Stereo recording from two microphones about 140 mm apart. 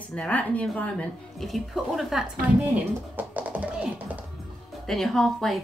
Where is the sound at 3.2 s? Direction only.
10° right (ahead or behind).